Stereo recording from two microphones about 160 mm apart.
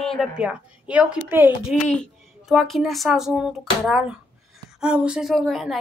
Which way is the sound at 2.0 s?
Centre (ahead or behind).